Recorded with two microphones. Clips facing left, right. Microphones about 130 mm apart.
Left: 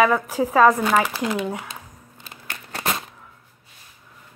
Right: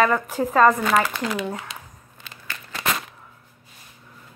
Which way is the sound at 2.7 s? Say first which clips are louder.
Even; 30° left (ahead or behind).